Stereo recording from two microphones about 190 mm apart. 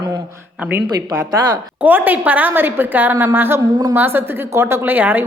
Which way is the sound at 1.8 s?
10° right (ahead or behind).